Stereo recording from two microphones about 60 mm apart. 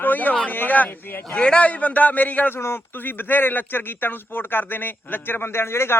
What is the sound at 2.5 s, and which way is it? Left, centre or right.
Speech, left.